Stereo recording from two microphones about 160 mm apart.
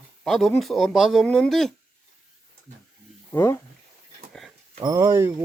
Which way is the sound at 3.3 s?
15° left (ahead or behind).